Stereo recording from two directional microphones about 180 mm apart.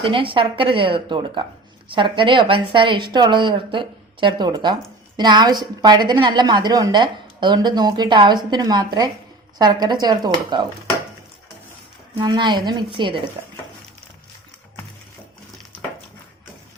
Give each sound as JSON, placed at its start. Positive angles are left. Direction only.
{"t": 0.0, "sound": "a woman's voice", "side_deg": -30}
{"t": 12.2, "sound": "a woman's voice", "side_deg": -25}